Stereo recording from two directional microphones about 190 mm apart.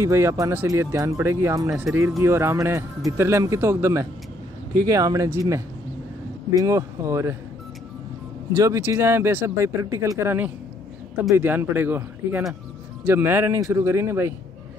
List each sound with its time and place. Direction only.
0.0 s speech: 15° right (ahead or behind)
8.5 s speech: 15° right (ahead or behind)